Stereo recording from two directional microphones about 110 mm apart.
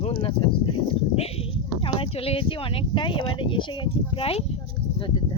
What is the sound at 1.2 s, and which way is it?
Speech, 65° left (ahead or behind).